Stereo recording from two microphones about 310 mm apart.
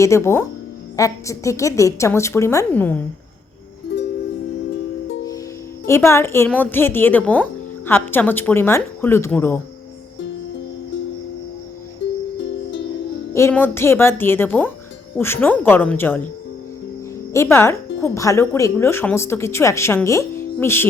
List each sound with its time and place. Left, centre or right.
0.0 s speech: centre
5.8 s speech: centre
12.4 s music: left
13.3 s speech: centre
17.3 s speech: centre